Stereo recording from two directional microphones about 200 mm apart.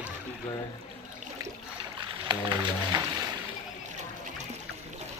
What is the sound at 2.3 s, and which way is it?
Speech, 20° right (ahead or behind).